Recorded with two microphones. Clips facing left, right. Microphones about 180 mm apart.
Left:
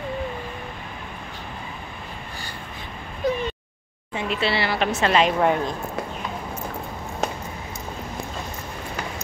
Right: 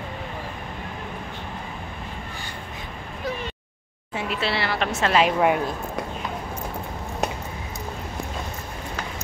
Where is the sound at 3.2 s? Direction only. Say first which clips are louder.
Left 7 dB; 20° left (ahead or behind).